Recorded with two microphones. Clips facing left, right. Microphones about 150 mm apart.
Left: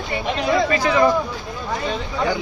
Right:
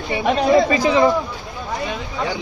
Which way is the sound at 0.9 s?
20° right (ahead or behind).